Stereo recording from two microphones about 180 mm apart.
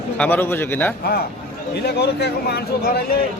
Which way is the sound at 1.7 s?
65° left (ahead or behind).